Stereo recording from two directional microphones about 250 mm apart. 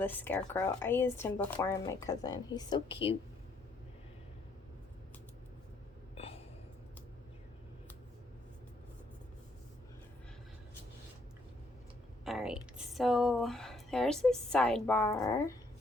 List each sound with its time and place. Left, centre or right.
0.0 s speech: centre
6.1 s gasp: left
12.2 s speech: centre